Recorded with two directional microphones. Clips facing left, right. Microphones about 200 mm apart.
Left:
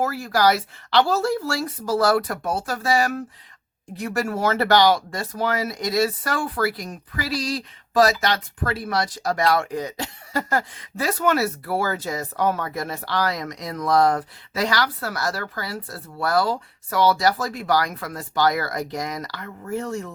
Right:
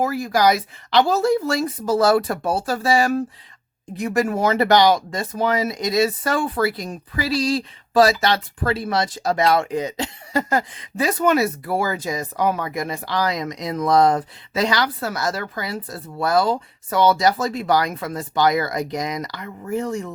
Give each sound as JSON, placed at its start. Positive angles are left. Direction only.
{"t": 0.0, "sound": "speech", "side_deg": -15}
{"t": 3.9, "sound": "speech", "side_deg": -20}